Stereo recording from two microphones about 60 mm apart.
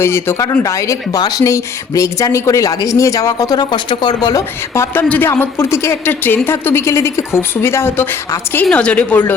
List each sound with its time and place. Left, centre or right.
0.0 s a woman's voice: left
0.6 s speech: left
4.9 s speech: left
5.3 s a woman's voice: left
6.1 s a woman's voice: left
6.8 s a woman's voice: left
8.7 s speech: centre